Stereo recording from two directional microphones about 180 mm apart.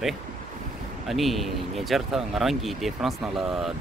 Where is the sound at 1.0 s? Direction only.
Centre (ahead or behind).